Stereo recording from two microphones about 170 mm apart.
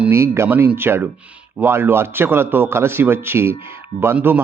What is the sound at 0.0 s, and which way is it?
Speech, 15° right (ahead or behind).